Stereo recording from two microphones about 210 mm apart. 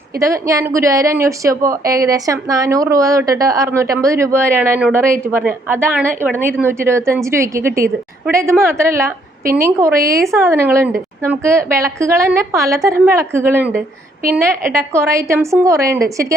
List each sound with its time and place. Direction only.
0.2 s a woman's voice: 15° right (ahead or behind)
9.9 s a woman's voice: 45° right (ahead or behind)
10.3 s a woman's voice: 10° right (ahead or behind)